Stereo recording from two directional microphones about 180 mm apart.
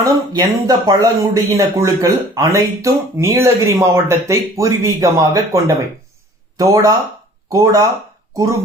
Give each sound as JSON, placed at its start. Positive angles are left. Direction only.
{"t": 0.0, "sound": "speech", "side_deg": -20}